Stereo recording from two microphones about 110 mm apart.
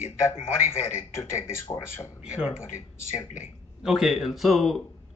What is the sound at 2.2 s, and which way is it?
Speech, 10° right (ahead or behind).